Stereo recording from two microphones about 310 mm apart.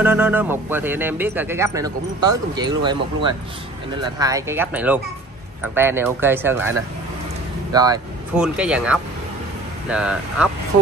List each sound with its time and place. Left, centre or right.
0.0 s speech: centre
7.7 s speech: centre